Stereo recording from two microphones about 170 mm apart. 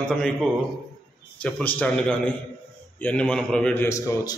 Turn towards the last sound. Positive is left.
turn(degrees=15)  # may be behind; listen again after turning